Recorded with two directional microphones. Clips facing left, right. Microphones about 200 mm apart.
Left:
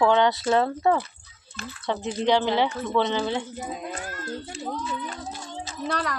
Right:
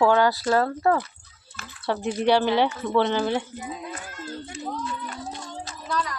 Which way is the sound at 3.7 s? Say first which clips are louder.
Left 1 dB; 50° left (ahead or behind).